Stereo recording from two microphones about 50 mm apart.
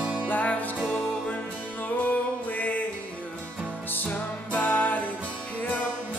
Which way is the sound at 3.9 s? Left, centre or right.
Left.